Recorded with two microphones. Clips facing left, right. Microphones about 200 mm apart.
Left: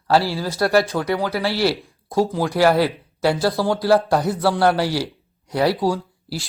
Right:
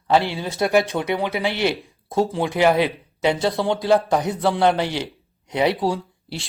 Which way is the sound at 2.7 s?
20° right (ahead or behind).